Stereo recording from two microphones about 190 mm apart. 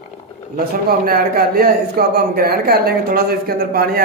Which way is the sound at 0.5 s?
50° right (ahead or behind).